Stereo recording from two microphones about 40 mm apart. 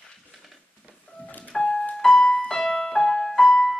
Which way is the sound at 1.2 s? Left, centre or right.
Left.